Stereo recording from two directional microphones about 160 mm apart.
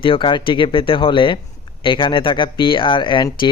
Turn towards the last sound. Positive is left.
turn(degrees=30)  # may be behind; listen again after turning